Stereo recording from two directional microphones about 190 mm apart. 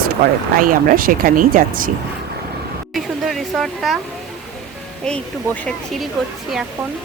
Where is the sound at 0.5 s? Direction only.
45° right (ahead or behind).